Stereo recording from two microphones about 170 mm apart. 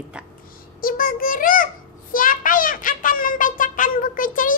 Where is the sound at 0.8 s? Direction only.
55° left (ahead or behind).